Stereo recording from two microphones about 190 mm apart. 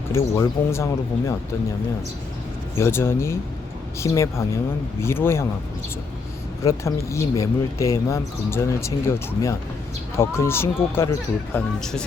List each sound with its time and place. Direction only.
0.1 s speech: 15° left (ahead or behind)
2.7 s speech: 15° left (ahead or behind)
6.7 s speech: 15° left (ahead or behind)
11.8 s speech: 5° left (ahead or behind)